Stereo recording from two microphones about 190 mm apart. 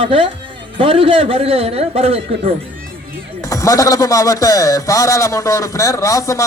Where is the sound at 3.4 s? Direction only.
15° left (ahead or behind).